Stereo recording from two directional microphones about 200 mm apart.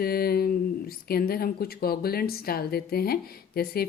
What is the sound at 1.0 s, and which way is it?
A woman's voice, 50° left (ahead or behind).